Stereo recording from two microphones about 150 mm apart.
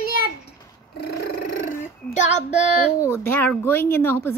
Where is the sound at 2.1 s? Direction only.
50° left (ahead or behind).